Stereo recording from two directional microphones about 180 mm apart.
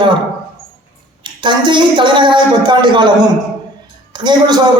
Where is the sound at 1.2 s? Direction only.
25° right (ahead or behind).